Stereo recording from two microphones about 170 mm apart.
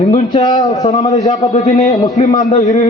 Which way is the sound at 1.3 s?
45° left (ahead or behind).